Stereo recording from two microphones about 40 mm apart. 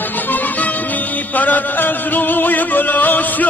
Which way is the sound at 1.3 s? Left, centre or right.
Left.